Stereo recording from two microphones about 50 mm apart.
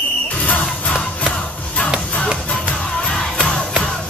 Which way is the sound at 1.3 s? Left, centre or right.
Left.